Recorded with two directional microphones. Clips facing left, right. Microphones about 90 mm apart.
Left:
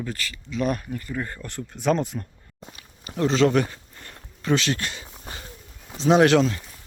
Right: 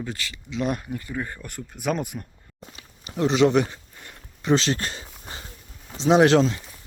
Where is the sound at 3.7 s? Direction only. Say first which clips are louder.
Even; 15° right (ahead or behind).